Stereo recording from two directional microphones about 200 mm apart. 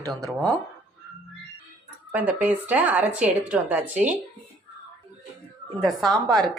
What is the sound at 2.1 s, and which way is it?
A woman's voice, 5° right (ahead or behind).